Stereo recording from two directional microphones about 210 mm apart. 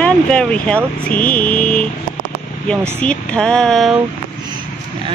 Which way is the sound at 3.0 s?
5° left (ahead or behind).